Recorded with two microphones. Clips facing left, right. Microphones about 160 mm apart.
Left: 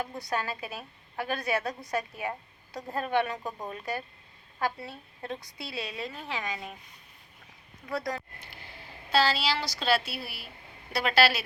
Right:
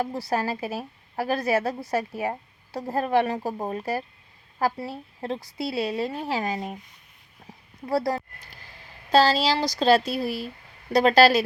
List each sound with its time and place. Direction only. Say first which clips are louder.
0.0 s a woman's voice: right 6 dB; 35° right (ahead or behind)
7.9 s a woman's voice: right 8 dB; 35° right (ahead or behind)